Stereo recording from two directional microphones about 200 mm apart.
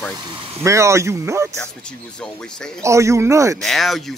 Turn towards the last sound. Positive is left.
turn(degrees=0)  # may be behind; listen again after turning